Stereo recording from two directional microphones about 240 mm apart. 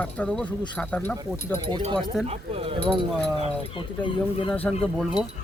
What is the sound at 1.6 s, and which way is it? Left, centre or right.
Speech, centre.